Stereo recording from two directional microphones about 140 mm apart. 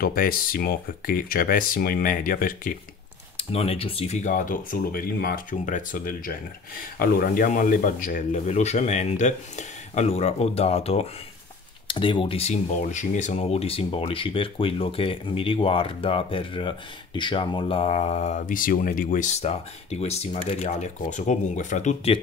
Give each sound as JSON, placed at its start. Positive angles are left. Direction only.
{"t": 0.0, "sound": "speech", "side_deg": 90}
{"t": 3.3, "sound": "a man's voice", "side_deg": 45}
{"t": 8.3, "sound": "speech", "side_deg": 55}
{"t": 18.5, "sound": "speech", "side_deg": 75}